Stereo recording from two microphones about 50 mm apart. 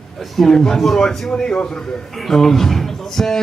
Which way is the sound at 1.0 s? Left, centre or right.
Centre.